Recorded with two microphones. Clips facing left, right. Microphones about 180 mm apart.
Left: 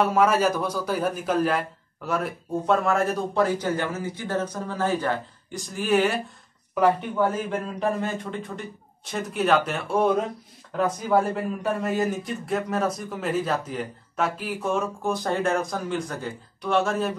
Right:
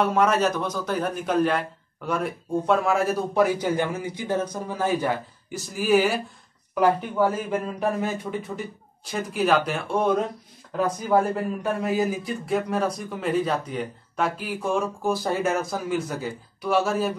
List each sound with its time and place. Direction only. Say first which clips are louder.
0.0 s a man's voice: left 1 dB; 5° left (ahead or behind)